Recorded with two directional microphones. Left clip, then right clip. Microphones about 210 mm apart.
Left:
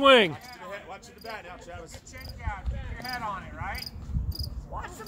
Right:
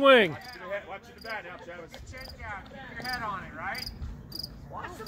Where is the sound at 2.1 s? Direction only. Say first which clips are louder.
Left 1 dB; 50° left (ahead or behind).